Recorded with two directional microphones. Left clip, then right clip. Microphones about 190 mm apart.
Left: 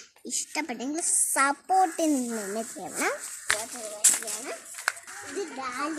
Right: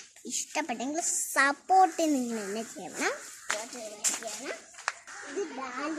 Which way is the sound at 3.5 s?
50° left (ahead or behind).